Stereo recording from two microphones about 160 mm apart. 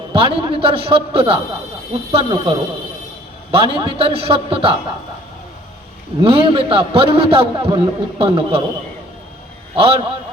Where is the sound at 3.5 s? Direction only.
35° right (ahead or behind).